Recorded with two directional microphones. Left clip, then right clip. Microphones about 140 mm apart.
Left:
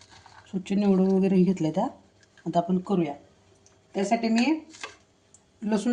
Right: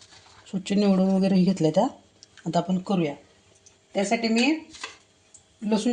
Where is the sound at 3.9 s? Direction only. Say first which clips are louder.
Right 1 dB; 25° right (ahead or behind).